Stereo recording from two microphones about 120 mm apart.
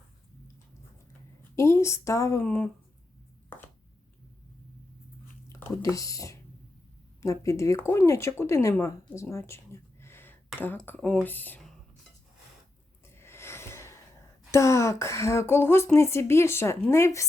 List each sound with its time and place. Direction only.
1.5 s a woman's voice: 25° left (ahead or behind)
2.4 s speech: 15° left (ahead or behind)
5.5 s a woman's voice: 20° left (ahead or behind)
13.1 s a sound: 20° left (ahead or behind)
14.5 s a woman's voice: 25° left (ahead or behind)